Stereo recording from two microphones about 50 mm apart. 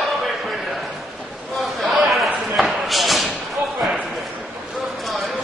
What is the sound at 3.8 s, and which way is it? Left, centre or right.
Basketball bounce, centre.